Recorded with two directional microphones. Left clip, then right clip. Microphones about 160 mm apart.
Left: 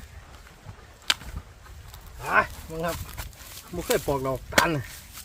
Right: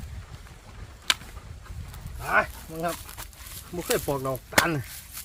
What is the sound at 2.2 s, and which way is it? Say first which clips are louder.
Speech: left 1 dB; 25° left (ahead or behind).